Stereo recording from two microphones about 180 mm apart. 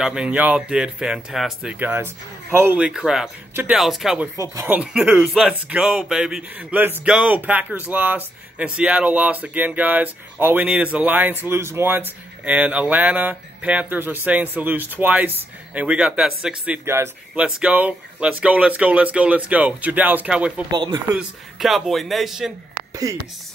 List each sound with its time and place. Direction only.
0.0 s speech: 5° right (ahead or behind)
4.4 s speech: 15° right (ahead or behind)
20.7 s speech: 25° right (ahead or behind)
21.1 s speech: 5° right (ahead or behind)